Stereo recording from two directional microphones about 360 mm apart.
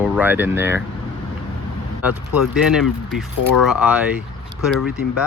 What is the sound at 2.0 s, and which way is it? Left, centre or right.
Speech, centre.